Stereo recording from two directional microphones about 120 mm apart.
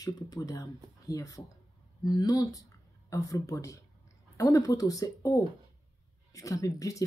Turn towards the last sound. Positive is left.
turn(degrees=25)  # may be behind; listen again after turning